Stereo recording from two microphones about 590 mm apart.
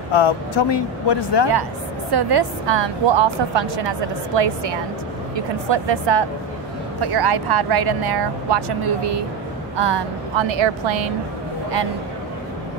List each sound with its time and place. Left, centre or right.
0.1 s speech: left
1.5 s a woman's voice: right
5.7 s a woman's voice: right